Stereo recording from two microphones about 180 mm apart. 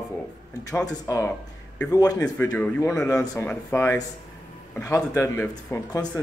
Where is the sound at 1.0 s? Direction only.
15° left (ahead or behind).